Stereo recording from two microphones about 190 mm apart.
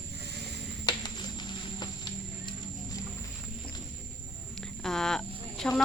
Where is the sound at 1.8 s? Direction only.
25° left (ahead or behind).